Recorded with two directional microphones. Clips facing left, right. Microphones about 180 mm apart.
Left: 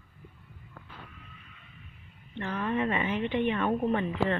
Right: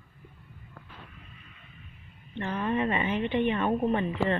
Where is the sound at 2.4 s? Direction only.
20° right (ahead or behind).